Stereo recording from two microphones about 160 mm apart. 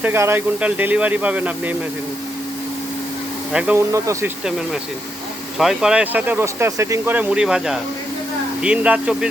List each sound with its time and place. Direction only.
0.0 s speech: 15° right (ahead or behind)
3.5 s speech: 5° right (ahead or behind)
3.8 s speech: 20° right (ahead or behind)
4.4 s speech: 5° right (ahead or behind)